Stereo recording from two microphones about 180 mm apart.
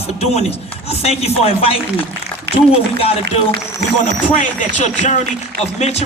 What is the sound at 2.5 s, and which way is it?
Speech, 65° right (ahead or behind).